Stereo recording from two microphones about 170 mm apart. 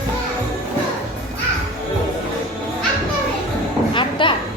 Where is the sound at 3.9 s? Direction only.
30° left (ahead or behind).